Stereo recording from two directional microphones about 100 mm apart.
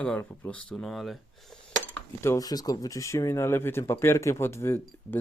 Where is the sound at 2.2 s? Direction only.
25° left (ahead or behind).